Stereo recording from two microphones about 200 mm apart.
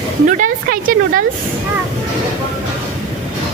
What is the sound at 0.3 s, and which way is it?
Speech, 45° right (ahead or behind).